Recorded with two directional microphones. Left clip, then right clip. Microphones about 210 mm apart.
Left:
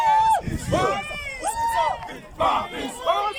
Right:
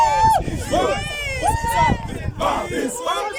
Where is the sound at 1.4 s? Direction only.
45° right (ahead or behind).